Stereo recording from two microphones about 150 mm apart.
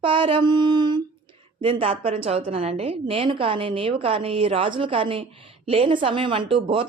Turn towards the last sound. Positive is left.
turn(degrees=-35)  # may be behind; listen again after turning